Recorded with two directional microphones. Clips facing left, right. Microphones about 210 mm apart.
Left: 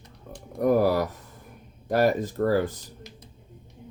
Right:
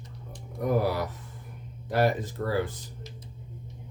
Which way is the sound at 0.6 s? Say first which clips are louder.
Left 6 dB; 45° left (ahead or behind).